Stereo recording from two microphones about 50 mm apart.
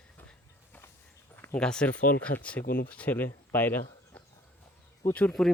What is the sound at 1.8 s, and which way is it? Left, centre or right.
Speech, left.